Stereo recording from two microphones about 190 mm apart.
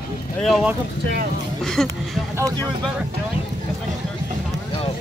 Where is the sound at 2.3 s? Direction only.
15° right (ahead or behind).